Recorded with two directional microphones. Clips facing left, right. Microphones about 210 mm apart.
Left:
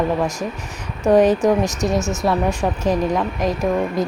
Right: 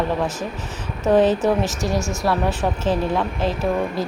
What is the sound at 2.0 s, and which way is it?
Speech, 20° left (ahead or behind).